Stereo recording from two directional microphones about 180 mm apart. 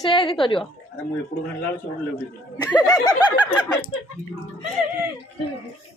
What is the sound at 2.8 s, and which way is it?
Snicker, 20° left (ahead or behind).